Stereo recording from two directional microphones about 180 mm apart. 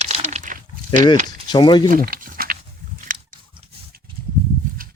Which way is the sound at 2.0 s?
55° right (ahead or behind).